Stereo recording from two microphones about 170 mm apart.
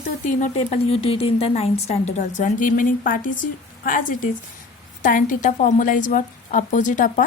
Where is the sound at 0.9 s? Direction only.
35° left (ahead or behind).